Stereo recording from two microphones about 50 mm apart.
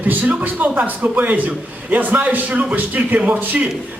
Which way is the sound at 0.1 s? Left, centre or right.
Right.